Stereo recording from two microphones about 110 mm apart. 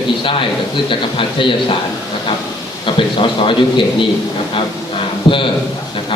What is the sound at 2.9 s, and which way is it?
A man's voice, 50° left (ahead or behind).